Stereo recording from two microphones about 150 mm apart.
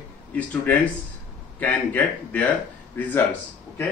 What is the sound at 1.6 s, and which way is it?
A man's voice, 10° left (ahead or behind).